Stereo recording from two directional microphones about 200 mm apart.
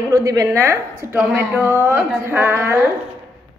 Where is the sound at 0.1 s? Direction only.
15° right (ahead or behind).